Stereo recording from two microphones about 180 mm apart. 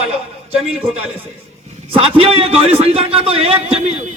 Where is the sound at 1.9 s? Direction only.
30° right (ahead or behind).